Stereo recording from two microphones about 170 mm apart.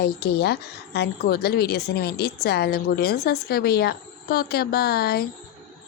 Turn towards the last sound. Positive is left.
turn(degrees=65)  # may be behind; listen again after turning